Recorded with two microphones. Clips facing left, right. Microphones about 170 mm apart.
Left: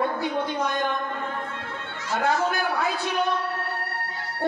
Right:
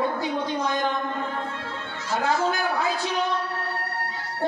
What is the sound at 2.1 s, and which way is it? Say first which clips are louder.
Speech: even; 55° left (ahead or behind).